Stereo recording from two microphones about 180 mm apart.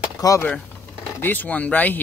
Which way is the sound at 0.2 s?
20° left (ahead or behind).